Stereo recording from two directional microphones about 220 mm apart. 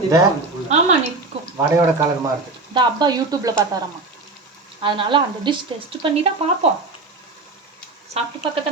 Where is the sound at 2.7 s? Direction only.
20° right (ahead or behind).